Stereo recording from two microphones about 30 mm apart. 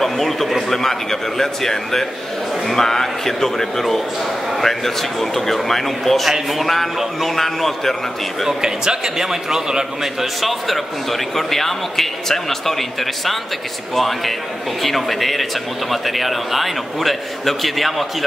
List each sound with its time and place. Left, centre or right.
0.0 s a man's voice: centre
8.5 s a man's voice: right
10.2 s a man's voice: centre